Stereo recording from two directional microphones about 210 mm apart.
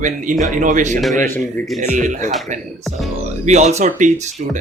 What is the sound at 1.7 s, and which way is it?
Speech, 35° right (ahead or behind).